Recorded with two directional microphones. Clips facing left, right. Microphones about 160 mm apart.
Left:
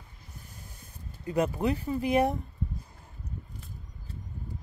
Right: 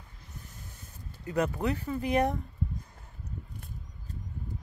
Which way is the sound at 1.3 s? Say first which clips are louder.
Left 2 dB; 10° left (ahead or behind).